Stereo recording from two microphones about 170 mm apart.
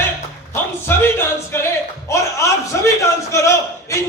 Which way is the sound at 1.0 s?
15° left (ahead or behind).